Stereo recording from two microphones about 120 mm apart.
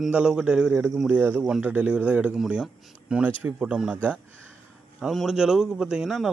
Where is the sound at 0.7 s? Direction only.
20° right (ahead or behind).